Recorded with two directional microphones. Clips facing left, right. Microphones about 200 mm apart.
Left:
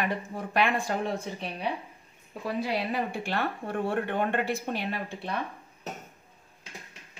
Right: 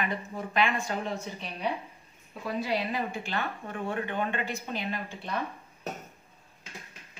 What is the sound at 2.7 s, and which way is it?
A woman's voice, 55° left (ahead or behind).